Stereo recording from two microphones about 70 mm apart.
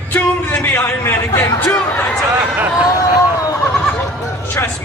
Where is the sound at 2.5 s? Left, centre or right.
Right.